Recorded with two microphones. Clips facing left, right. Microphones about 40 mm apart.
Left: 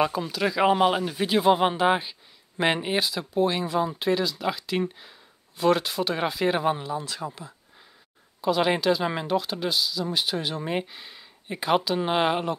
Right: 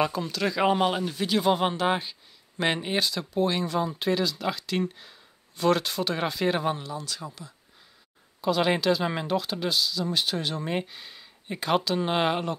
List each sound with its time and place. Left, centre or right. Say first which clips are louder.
0.0 s speech: left 2 dB; centre
6.8 s speech: left 4 dB; left
8.4 s speech: left 1 dB; centre